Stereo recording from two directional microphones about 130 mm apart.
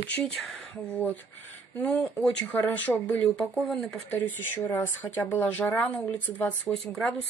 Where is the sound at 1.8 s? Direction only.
10° left (ahead or behind).